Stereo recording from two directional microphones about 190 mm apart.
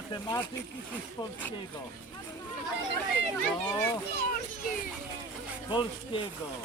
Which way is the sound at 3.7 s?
15° left (ahead or behind).